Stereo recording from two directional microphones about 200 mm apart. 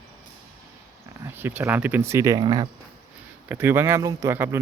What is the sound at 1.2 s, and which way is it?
Speech, 10° right (ahead or behind).